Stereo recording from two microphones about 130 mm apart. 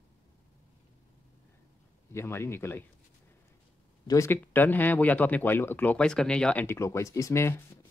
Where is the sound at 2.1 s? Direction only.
20° left (ahead or behind).